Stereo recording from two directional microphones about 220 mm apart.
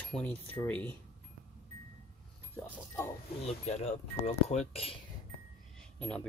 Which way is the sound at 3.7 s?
30° left (ahead or behind).